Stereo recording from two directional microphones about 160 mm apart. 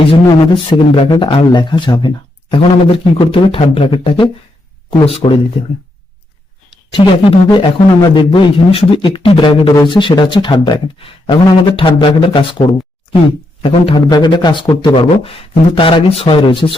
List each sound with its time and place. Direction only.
0.1 s speech: 30° left (ahead or behind)